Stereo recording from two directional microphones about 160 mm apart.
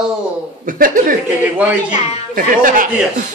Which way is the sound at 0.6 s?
60° right (ahead or behind).